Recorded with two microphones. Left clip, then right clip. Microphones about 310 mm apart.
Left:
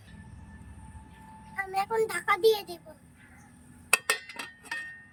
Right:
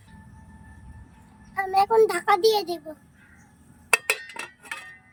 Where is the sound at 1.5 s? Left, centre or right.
Centre.